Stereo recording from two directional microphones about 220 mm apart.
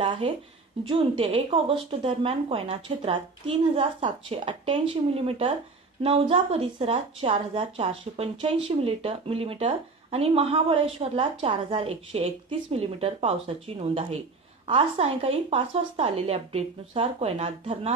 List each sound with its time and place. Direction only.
0.0 s speech: 25° right (ahead or behind)
14.7 s speech: 25° right (ahead or behind)